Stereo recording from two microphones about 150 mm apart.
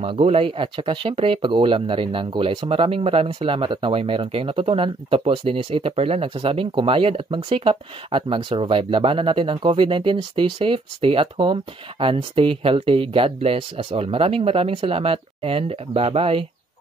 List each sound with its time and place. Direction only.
0.0 s speech: 40° right (ahead or behind)